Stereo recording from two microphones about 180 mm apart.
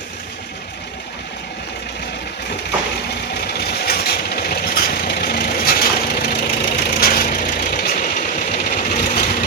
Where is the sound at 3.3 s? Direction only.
60° left (ahead or behind).